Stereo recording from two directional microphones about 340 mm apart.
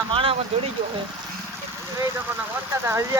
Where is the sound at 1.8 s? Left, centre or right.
Centre.